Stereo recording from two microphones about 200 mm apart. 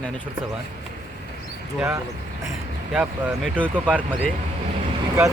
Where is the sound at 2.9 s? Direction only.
5° right (ahead or behind).